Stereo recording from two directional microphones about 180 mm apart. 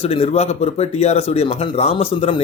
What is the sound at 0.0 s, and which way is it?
Speech, 35° left (ahead or behind).